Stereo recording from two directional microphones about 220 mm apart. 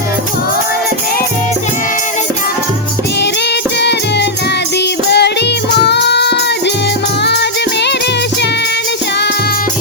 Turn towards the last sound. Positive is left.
turn(degrees=50)  # may be behind; listen again after turning